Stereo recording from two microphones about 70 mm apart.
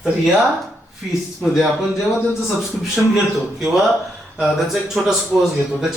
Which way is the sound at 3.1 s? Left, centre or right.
Centre.